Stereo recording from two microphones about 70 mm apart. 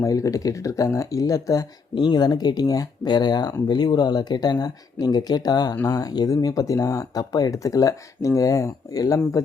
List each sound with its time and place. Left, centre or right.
0.0 s speech: left
2.0 s speech: left